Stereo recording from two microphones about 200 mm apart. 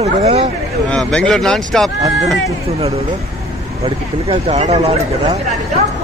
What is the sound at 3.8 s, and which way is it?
Speech, 30° right (ahead or behind).